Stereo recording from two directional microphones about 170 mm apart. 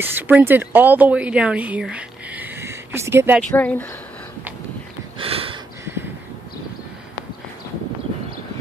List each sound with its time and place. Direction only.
0.0 s speech: 10° right (ahead or behind)
3.5 s speech: 10° left (ahead or behind)
5.2 s a sound: 35° right (ahead or behind)